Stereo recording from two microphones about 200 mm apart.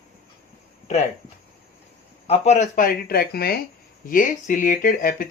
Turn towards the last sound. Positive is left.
turn(degrees=45)  # may be behind; listen again after turning